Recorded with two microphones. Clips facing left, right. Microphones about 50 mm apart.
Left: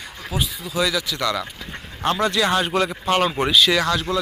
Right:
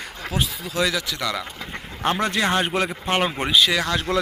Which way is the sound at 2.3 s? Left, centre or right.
Right.